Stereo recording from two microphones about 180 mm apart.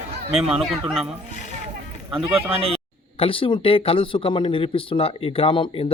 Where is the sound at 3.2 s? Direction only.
30° left (ahead or behind).